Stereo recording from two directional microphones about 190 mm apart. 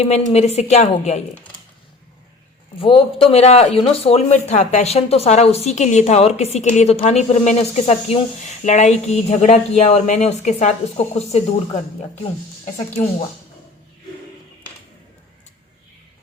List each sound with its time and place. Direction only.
0.0 s a man's voice: 35° left (ahead or behind)
2.7 s a man's voice: 30° left (ahead or behind)